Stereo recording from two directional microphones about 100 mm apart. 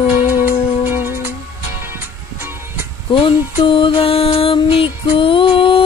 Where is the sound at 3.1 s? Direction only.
60° left (ahead or behind).